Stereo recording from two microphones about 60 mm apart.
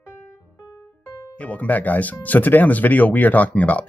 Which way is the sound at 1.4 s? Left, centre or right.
Left.